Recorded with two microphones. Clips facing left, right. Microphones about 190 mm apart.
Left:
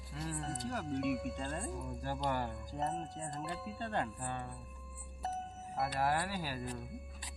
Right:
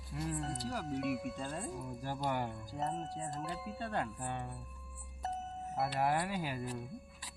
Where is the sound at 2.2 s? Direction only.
10° right (ahead or behind).